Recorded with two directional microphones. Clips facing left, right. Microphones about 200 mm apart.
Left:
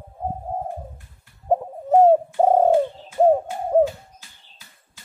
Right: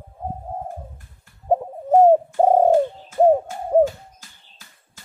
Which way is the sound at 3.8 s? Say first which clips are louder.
Right 1 dB; 45° right (ahead or behind).